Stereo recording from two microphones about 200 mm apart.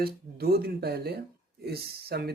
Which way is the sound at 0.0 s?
50° right (ahead or behind).